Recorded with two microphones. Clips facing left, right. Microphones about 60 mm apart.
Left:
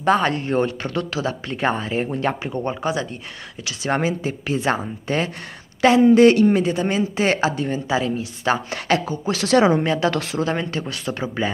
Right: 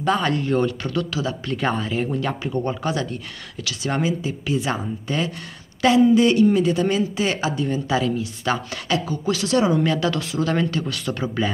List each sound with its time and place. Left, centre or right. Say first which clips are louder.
0.0 s speech: left 2 dB; left
1.5 s speech: left 1 dB; left
2.5 s speech: even; left
3.8 s speech: left 2 dB; left
6.1 s speech: left 3 dB; left
6.6 s speech: right 1 dB; left
7.0 s speech: left 3 dB; left
8.8 s speech: left 3 dB; left
9.5 s speech: left 4 dB; left
9.8 s speech: left 1 dB; left
10.1 s speech: left 2 dB; left
10.4 s speech: right 5 dB; left